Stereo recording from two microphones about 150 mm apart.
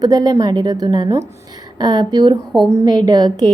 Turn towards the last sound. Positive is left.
turn(degrees=-25)  # may be behind; listen again after turning